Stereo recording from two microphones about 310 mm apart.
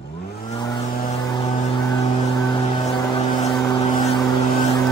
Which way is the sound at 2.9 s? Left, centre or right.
Centre.